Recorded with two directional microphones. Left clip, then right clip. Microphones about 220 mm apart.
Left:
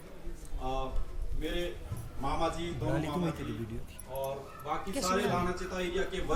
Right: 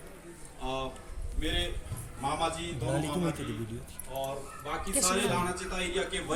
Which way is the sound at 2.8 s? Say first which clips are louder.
Right 2 dB; 30° right (ahead or behind).